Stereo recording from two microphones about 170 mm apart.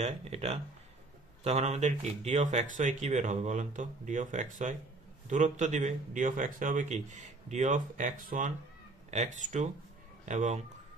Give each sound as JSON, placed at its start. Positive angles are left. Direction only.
{"t": 0.0, "sound": "speech", "side_deg": -40}